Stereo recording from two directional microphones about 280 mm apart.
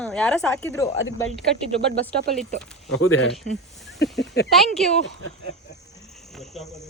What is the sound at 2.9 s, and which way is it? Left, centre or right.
Speech, left.